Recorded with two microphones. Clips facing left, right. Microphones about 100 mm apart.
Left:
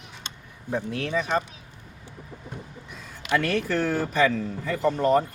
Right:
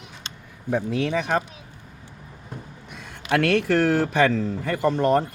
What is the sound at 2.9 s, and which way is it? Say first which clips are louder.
A man's voice: right 2 dB; 75° right (ahead or behind).